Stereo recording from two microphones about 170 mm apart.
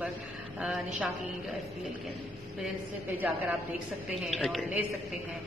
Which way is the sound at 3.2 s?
10° right (ahead or behind).